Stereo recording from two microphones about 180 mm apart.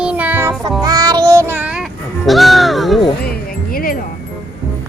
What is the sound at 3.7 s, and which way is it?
Music, 55° left (ahead or behind).